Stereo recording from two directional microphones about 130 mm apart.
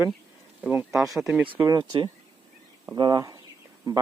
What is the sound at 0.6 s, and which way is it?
Speech, 15° right (ahead or behind).